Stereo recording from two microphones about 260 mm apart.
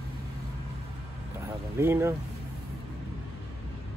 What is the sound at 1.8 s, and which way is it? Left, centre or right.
Speech, centre.